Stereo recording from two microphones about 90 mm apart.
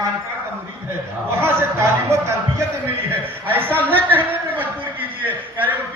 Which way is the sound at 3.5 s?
25° right (ahead or behind).